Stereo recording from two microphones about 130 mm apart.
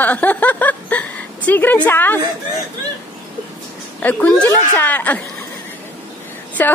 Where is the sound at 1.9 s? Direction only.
15° left (ahead or behind).